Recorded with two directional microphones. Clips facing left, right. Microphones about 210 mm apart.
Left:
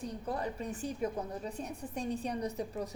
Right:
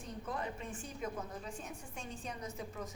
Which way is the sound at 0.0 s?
35° left (ahead or behind).